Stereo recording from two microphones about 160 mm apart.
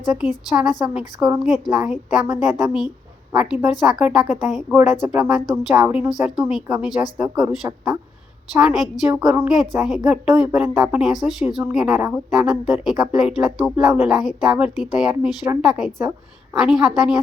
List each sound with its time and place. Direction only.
0.1 s a woman's voice: 5° right (ahead or behind)